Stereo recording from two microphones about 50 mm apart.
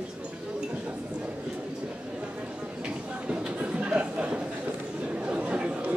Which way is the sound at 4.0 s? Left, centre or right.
Right.